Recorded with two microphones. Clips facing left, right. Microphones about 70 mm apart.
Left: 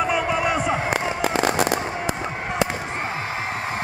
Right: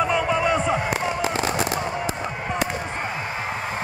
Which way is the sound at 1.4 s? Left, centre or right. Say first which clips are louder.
Left 3 dB; left.